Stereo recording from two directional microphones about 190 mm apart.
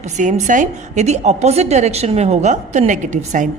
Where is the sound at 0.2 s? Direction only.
40° right (ahead or behind).